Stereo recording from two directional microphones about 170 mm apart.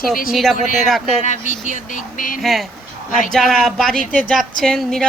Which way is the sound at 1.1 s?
45° left (ahead or behind).